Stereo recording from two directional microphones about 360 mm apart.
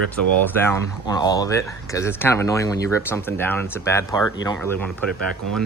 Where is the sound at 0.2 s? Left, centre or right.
Right.